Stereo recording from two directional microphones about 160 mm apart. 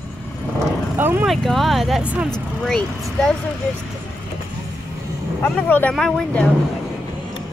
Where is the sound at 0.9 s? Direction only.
15° right (ahead or behind).